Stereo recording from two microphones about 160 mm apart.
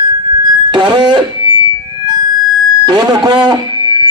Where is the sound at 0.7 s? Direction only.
30° right (ahead or behind).